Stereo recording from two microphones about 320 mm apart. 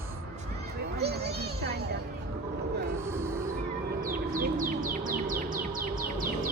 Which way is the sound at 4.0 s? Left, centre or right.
Right.